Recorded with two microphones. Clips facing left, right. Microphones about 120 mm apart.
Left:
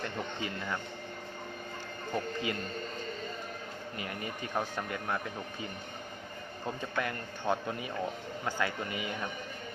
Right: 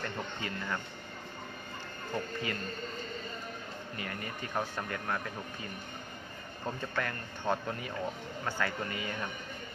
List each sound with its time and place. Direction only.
2.1 s speech: 20° left (ahead or behind)
3.9 s speech: 20° left (ahead or behind)
6.9 s a man's voice: 15° left (ahead or behind)